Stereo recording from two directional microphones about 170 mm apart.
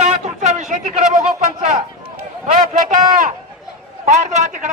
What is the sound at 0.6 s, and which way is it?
Speech, 45° right (ahead or behind).